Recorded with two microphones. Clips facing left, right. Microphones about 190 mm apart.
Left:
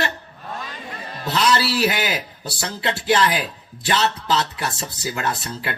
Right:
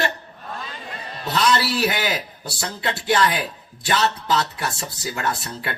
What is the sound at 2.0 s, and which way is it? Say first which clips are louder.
Speech: even; 20° left (ahead or behind).